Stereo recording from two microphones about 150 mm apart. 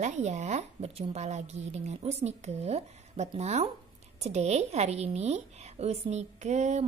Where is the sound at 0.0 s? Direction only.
50° right (ahead or behind).